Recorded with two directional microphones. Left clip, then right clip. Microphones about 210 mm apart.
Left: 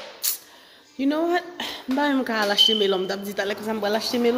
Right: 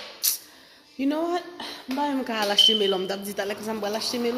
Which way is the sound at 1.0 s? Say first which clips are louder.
Left 3 dB; 5° left (ahead or behind).